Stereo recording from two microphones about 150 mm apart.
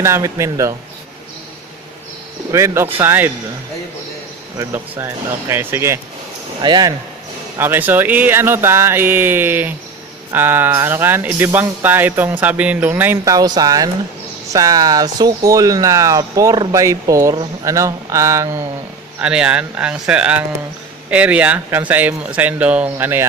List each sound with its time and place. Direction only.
0.0 s speech: 20° right (ahead or behind)
2.5 s speech: 20° right (ahead or behind)
4.5 s speech: 20° right (ahead or behind)
6.6 s speech: 30° right (ahead or behind)
7.6 s speech: 15° right (ahead or behind)
13.3 s speech: 25° right (ahead or behind)
19.2 s speech: 5° right (ahead or behind)